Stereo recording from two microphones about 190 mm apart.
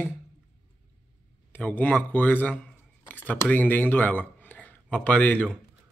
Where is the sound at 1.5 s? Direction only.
10° left (ahead or behind).